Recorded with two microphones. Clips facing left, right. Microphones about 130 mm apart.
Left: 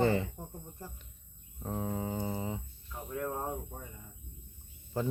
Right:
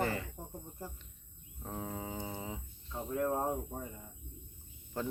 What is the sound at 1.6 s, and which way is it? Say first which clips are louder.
Speech: left 5 dB; centre (ahead or behind).